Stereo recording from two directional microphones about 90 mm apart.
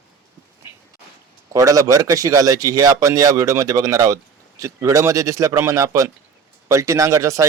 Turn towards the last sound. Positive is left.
turn(degrees=-35)  # may be behind; listen again after turning